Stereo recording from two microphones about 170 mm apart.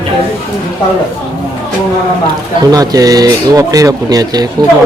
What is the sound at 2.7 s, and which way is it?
Speech, 20° right (ahead or behind).